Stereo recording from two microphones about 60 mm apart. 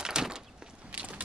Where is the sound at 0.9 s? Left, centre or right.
Right.